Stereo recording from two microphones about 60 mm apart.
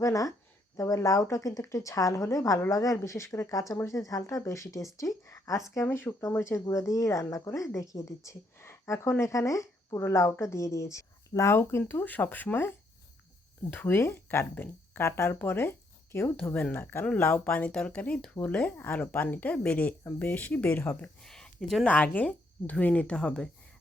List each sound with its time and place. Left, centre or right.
0.0 s speech: left
3.5 s speech: left
5.7 s speech: left
9.2 s speech: left
11.9 s speech: left
13.7 s speech: left
20.7 s speech: left
21.2 s a sound: centre
21.8 s speech: left